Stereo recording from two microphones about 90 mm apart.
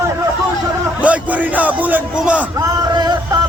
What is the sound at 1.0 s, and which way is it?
A man's voice, 15° right (ahead or behind).